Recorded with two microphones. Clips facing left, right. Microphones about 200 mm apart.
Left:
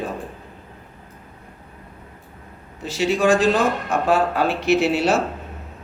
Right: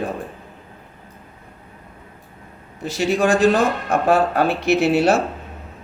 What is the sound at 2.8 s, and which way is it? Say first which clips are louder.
Speech: right 1 dB; 55° right (ahead or behind).